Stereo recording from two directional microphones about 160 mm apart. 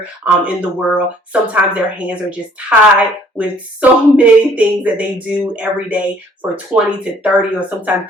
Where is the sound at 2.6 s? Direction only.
5° right (ahead or behind).